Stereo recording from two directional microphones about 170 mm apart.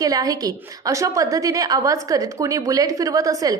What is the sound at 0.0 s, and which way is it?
A woman's voice, 20° right (ahead or behind).